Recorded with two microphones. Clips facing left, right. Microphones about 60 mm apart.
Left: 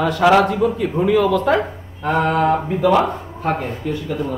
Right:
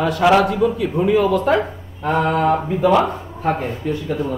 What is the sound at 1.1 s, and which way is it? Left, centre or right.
Speech, left.